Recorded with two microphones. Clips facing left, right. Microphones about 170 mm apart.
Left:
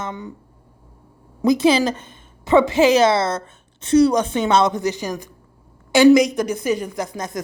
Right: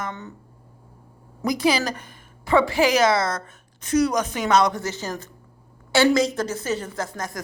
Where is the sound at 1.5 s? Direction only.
25° left (ahead or behind).